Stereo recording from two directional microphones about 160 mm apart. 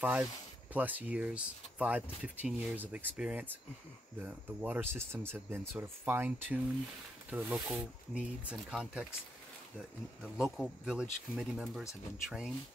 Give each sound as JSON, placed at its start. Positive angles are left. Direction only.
{"t": 0.0, "sound": "speech", "side_deg": -10}
{"t": 10.3, "sound": "speech", "side_deg": -5}